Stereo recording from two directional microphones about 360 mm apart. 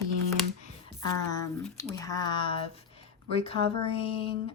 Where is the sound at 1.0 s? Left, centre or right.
Centre.